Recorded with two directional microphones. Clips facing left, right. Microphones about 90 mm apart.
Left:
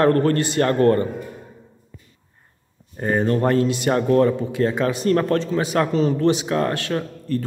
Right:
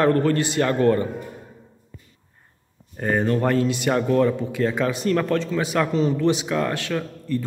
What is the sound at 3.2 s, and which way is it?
A man's voice, 40° left (ahead or behind).